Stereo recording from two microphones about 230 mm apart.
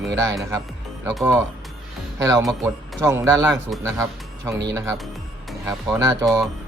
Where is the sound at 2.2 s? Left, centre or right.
Centre.